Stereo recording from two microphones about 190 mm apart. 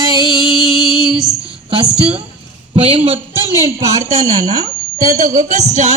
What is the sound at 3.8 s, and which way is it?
Speech, 15° right (ahead or behind).